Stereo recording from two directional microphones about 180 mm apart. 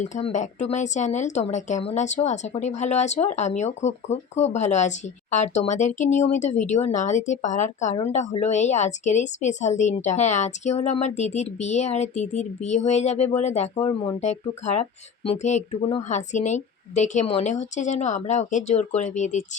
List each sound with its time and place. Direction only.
0.0 s speech: 40° left (ahead or behind)